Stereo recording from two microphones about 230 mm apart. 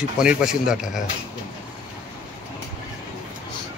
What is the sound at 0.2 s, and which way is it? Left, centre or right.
Speech, centre.